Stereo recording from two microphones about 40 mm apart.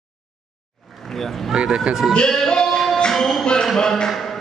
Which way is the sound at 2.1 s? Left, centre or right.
Centre.